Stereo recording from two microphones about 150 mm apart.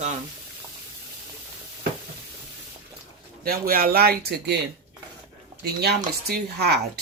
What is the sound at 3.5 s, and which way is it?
Speech, 75° right (ahead or behind).